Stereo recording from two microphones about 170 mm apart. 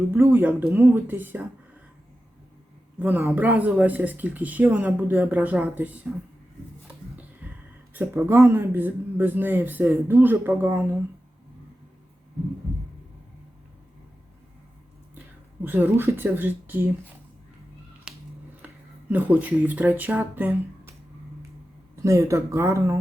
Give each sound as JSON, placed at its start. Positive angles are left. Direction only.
{"t": 0.1, "sound": "speech", "side_deg": -10}
{"t": 3.0, "sound": "speech", "side_deg": -15}
{"t": 7.4, "sound": "a sound", "side_deg": -10}
{"t": 7.9, "sound": "speech", "side_deg": -15}
{"t": 15.6, "sound": "speech", "side_deg": -10}
{"t": 18.1, "sound": "finger snapping", "side_deg": -5}
{"t": 18.6, "sound": "a sound", "side_deg": -10}
{"t": 19.1, "sound": "speech", "side_deg": -10}
{"t": 22.0, "sound": "speech", "side_deg": -15}